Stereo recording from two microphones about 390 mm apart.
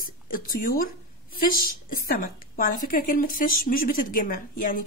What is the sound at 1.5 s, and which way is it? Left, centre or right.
Speech, left.